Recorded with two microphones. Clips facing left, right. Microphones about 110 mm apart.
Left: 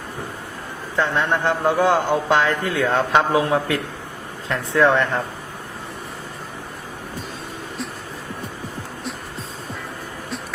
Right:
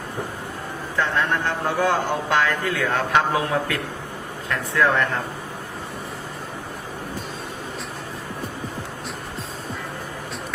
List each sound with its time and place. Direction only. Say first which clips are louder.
0.9 s a man's voice: left 2 dB; 20° left (ahead or behind)